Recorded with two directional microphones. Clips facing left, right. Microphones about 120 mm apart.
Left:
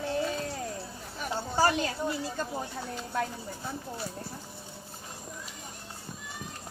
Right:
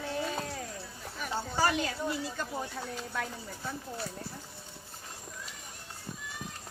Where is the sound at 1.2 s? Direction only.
35° left (ahead or behind).